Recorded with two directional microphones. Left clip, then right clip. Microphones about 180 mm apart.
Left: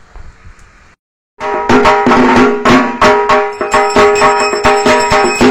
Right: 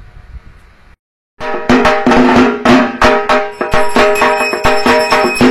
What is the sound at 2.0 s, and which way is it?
Music, 25° left (ahead or behind).